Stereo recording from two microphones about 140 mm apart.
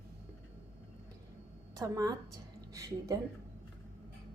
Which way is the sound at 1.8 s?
25° right (ahead or behind).